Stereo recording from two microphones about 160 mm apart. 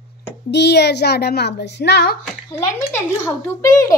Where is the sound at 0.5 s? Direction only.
90° left.